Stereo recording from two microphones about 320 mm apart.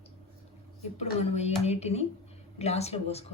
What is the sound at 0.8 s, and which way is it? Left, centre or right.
Speech, centre.